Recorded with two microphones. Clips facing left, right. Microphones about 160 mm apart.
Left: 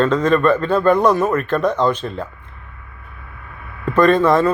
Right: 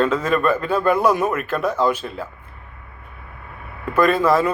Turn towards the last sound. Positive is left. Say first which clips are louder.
# left 3 dB
turn(degrees=-5)  # may be behind; listen again after turning